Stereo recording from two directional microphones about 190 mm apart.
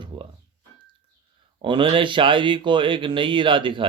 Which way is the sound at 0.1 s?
25° right (ahead or behind).